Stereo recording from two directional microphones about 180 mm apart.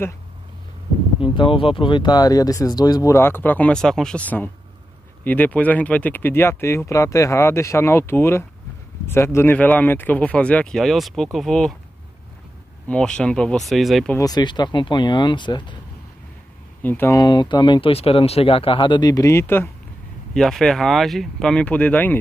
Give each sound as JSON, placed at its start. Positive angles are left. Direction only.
{"t": 1.3, "sound": "speech", "side_deg": 30}
{"t": 12.8, "sound": "speech", "side_deg": 5}
{"t": 14.1, "sound": "speech", "side_deg": 20}
{"t": 16.8, "sound": "speech", "side_deg": 10}
{"t": 17.2, "sound": "speech", "side_deg": 25}
{"t": 20.3, "sound": "speech", "side_deg": 0}